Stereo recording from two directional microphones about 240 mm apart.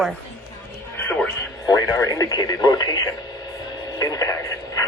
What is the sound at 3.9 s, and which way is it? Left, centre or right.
Radio, centre.